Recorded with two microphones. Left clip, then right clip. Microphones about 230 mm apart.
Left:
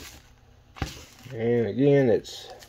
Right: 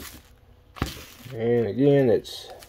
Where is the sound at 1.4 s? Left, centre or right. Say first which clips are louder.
Right 1 dB; centre.